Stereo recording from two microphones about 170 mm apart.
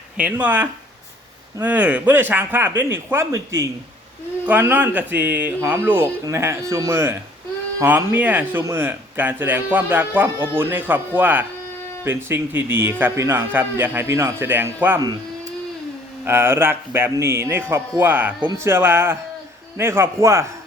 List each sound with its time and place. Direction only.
0.2 s speech: 10° right (ahead or behind)
16.2 s speech: 15° right (ahead or behind)